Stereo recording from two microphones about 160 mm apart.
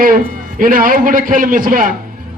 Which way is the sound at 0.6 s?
60° right (ahead or behind).